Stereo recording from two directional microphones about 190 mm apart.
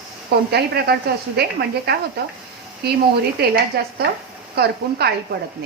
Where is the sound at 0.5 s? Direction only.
55° right (ahead or behind).